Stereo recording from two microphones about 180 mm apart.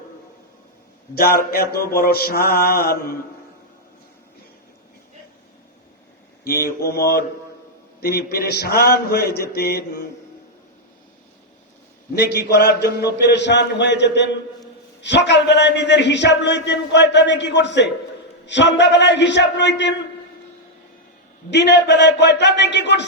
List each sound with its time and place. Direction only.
1.1 s mantra: 55° left (ahead or behind)
6.4 s mantra: 55° left (ahead or behind)
12.1 s a man's voice: 65° left (ahead or behind); by 20.0 s 80° left
21.5 s a man's voice: 75° left (ahead or behind)